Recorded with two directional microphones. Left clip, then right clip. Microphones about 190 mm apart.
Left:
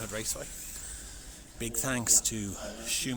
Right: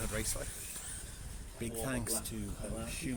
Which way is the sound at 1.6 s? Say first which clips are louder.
Left 6 dB; 30° left (ahead or behind).